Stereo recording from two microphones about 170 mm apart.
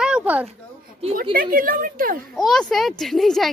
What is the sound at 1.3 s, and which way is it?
Speech, 55° right (ahead or behind).